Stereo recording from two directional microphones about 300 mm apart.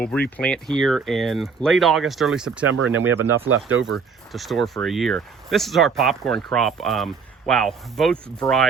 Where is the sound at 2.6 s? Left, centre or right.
Right.